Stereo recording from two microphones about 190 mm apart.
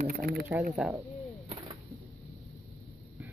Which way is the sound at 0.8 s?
5° right (ahead or behind).